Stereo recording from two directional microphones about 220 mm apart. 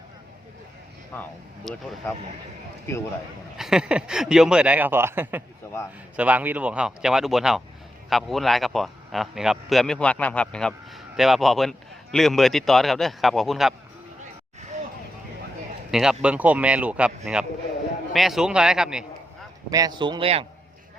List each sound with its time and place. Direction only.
1.1 s a man's voice: 10° left (ahead or behind)
3.6 s a man's voice: 5° right (ahead or behind)
15.9 s a man's voice: centre (ahead or behind)
18.1 s a man's voice: centre (ahead or behind)
19.7 s a man's voice: 15° right (ahead or behind)